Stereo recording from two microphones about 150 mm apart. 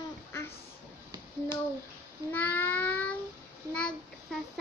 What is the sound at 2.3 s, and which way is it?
Child singing, 10° left (ahead or behind).